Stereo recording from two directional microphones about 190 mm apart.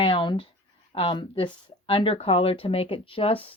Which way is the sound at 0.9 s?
30° left (ahead or behind).